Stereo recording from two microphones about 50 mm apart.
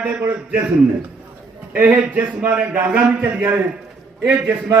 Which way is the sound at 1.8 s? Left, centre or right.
Right.